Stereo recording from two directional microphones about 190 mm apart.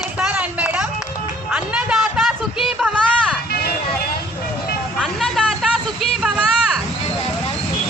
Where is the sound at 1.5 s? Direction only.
5° right (ahead or behind).